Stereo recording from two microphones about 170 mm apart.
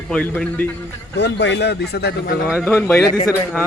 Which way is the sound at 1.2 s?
90° left.